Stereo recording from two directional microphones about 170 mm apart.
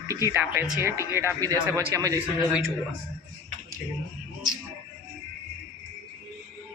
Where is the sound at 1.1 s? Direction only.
15° right (ahead or behind).